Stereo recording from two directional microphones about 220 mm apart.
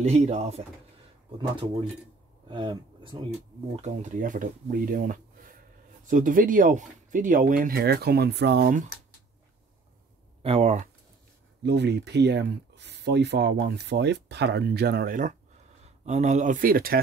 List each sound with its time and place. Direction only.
0.0 s speech: 30° right (ahead or behind)
2.5 s speech: 20° right (ahead or behind)
3.8 s speech: 35° right (ahead or behind)
10.4 s speech: 30° right (ahead or behind)
11.6 s speech: 50° right (ahead or behind)